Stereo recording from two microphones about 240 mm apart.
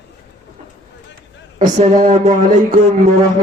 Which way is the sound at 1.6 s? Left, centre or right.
Right.